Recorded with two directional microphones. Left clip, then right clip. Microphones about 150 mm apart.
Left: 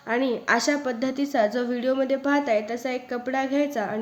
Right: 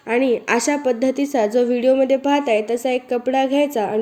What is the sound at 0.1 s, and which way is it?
A woman's voice, 25° right (ahead or behind).